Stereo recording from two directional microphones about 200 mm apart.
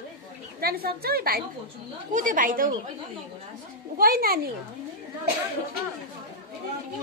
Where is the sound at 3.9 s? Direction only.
50° right (ahead or behind).